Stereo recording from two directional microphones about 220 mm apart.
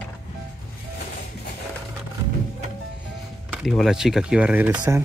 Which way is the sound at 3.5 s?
Centre (ahead or behind).